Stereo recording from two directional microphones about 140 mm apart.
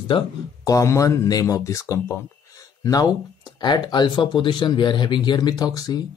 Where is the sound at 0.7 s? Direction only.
25° left (ahead or behind).